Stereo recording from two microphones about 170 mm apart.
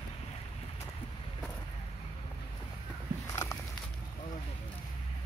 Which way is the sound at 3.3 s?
15° left (ahead or behind).